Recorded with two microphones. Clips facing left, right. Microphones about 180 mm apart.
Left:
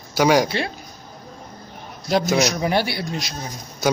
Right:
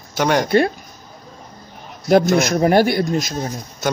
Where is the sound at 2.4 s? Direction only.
50° right (ahead or behind).